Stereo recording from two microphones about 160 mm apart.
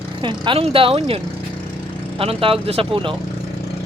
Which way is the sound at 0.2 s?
30° right (ahead or behind).